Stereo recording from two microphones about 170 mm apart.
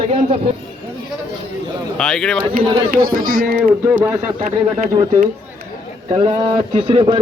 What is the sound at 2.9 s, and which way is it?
Speech, 55° right (ahead or behind).